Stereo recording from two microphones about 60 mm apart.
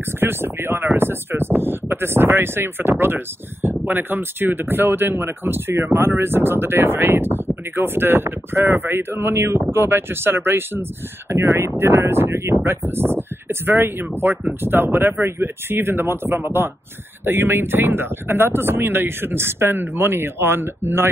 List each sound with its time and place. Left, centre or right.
0.2 s speech: right
11.2 s speech: right
11.5 s speech: right